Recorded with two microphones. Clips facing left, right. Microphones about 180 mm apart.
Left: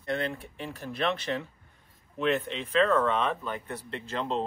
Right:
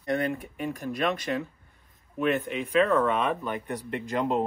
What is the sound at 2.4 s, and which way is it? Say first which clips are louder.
Speech: right 2 dB; 10° right (ahead or behind).